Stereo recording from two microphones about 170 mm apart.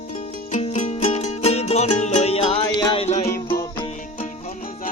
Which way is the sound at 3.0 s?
40° left (ahead or behind).